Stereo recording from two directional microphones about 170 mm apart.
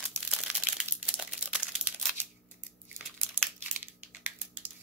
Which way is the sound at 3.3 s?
10° right (ahead or behind).